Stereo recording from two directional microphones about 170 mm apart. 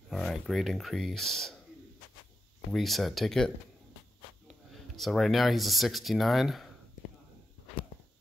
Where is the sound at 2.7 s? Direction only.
Centre (ahead or behind).